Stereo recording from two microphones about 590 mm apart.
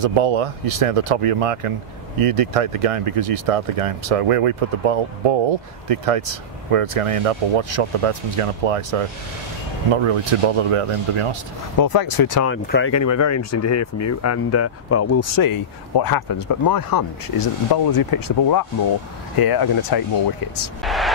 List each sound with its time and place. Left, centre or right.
0.0 s speech: right
11.8 s speech: left
12.4 s speech: centre; by 20.0 s left
20.8 s speech: centre